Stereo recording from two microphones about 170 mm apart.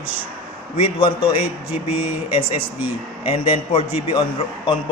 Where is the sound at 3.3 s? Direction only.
30° left (ahead or behind).